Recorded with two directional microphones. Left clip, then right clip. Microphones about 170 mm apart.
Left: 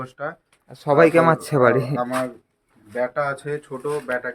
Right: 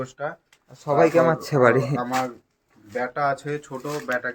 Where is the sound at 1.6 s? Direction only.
10° left (ahead or behind).